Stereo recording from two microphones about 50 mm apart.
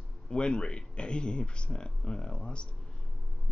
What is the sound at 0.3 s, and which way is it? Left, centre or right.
A man's voice, centre.